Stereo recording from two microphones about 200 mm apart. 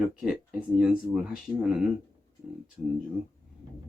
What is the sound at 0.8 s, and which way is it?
Speech, 5° right (ahead or behind).